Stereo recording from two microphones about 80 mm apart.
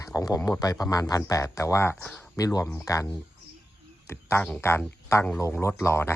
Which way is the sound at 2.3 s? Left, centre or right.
Left.